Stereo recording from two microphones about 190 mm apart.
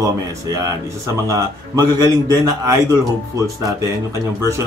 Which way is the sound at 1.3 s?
20° right (ahead or behind).